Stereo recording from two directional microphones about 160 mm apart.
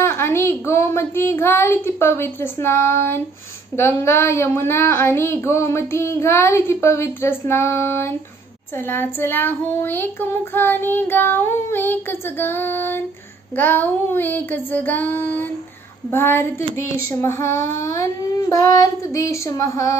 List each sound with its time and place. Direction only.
0.0 s speech: 15° left (ahead or behind)
18.5 s child singing: 20° left (ahead or behind)